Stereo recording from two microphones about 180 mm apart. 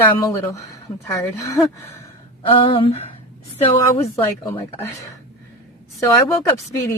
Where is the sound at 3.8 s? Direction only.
15° left (ahead or behind).